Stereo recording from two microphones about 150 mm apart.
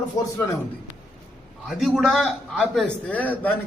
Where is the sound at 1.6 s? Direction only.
Centre (ahead or behind).